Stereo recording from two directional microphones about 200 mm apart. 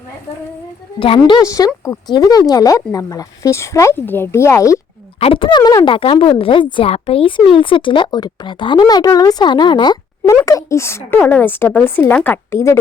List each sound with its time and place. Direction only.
0.9 s speech: 25° left (ahead or behind)
1.4 s speech: 15° left (ahead or behind)
5.2 s speech: 25° left (ahead or behind)